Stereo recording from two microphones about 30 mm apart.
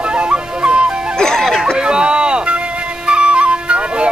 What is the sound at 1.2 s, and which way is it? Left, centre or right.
Music, centre.